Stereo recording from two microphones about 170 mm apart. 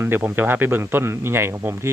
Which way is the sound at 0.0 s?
15° right (ahead or behind).